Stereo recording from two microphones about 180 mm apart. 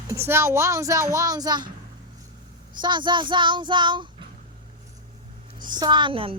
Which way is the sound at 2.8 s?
25° right (ahead or behind).